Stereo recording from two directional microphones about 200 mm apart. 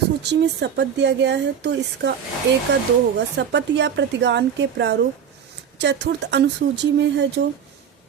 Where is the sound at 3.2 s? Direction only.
60° right (ahead or behind).